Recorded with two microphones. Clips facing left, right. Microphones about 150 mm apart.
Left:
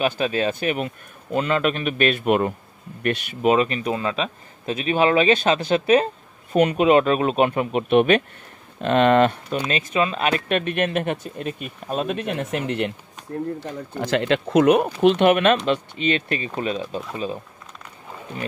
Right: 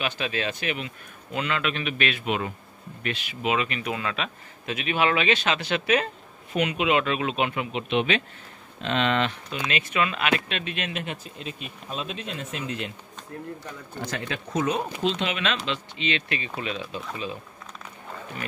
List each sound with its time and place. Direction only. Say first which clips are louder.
0.0 s speech: left 7 dB; 40° left (ahead or behind)
3.0 s a man's voice: left 8 dB; 40° left (ahead or behind)
9.6 s speech: left 4 dB; 35° left (ahead or behind); by 12.9 s 65° left (ahead or behind)
14.1 s speech: left 12 dB; 75° left (ahead or behind); by 17.0 s 40° left (ahead or behind)